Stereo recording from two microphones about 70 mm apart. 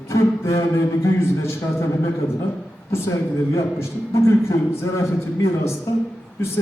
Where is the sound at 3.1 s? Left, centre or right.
Left.